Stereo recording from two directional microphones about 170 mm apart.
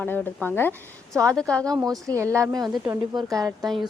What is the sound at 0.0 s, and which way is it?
A woman's voice, 10° left (ahead or behind).